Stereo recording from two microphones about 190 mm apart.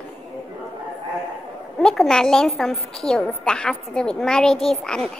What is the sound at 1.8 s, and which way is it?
A child's voice, 5° left (ahead or behind).